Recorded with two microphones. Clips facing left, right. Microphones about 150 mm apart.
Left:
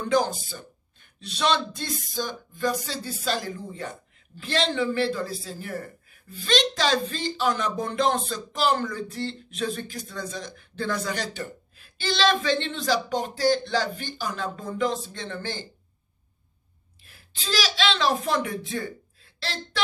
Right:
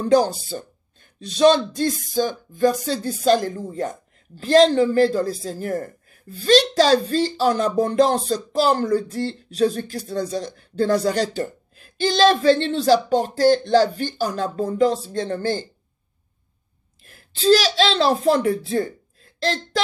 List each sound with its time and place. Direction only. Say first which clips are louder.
0.0 s speech: right 6 dB; 35° right (ahead or behind)
17.0 s a woman's voice: right 18 dB; 40° right (ahead or behind)